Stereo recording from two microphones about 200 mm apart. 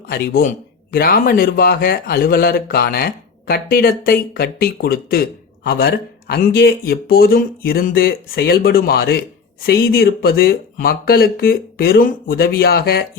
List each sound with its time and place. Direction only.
0.1 s speech: 50° left (ahead or behind)